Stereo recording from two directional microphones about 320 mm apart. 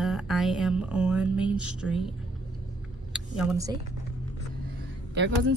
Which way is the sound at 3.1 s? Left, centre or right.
Centre.